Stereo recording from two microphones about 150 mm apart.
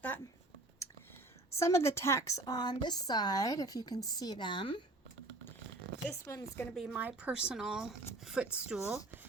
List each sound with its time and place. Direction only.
1.5 s a woman's voice: 20° left (ahead or behind); by 4.8 s 35° left (ahead or behind)
6.2 s speech: 20° left (ahead or behind)
6.7 s speech: centre (ahead or behind)